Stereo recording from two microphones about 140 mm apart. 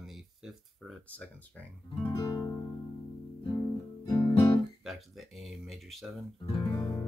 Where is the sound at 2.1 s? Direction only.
25° left (ahead or behind).